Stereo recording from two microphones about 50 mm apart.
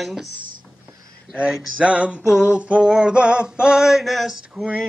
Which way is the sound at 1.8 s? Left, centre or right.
Right.